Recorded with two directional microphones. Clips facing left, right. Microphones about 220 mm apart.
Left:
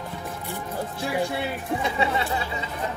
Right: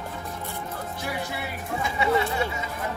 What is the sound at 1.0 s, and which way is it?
Speech, 30° left (ahead or behind).